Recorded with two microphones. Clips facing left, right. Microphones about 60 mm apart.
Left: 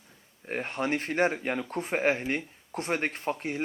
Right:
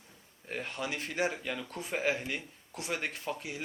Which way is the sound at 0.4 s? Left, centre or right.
Left.